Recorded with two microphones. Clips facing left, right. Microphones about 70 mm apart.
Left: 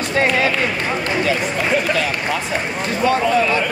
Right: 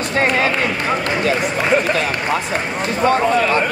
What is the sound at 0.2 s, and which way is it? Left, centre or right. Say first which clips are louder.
Speech: even; right.